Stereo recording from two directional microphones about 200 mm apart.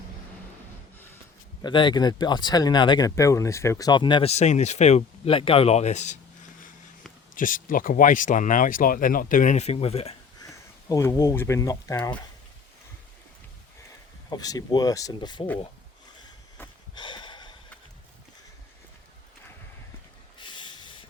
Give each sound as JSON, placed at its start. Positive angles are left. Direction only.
{"t": 0.9, "sound": "snort", "side_deg": 10}
{"t": 1.6, "sound": "speech", "side_deg": 20}
{"t": 7.3, "sound": "speech", "side_deg": 40}
{"t": 10.4, "sound": "speech", "side_deg": 15}
{"t": 14.3, "sound": "speech", "side_deg": 20}
{"t": 16.9, "sound": "sniff", "side_deg": 20}
{"t": 20.4, "sound": "a sound", "side_deg": 25}